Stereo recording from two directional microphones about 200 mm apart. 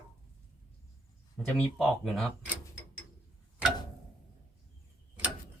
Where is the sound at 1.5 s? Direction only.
5° left (ahead or behind).